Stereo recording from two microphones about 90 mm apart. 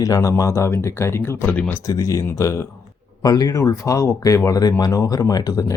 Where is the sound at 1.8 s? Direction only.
40° left (ahead or behind).